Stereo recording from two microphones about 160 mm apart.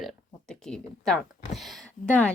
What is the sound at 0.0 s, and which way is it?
Speech, 5° left (ahead or behind).